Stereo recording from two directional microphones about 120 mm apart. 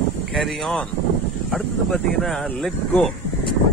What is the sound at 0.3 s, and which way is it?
Speech, centre (ahead or behind).